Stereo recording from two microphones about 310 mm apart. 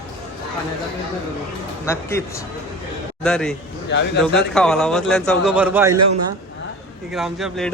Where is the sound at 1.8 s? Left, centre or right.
Centre.